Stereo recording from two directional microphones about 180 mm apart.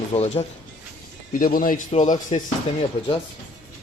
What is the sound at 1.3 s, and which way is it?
Speech, 50° left (ahead or behind).